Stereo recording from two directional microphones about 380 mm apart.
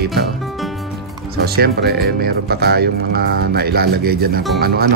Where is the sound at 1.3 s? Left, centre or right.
Right.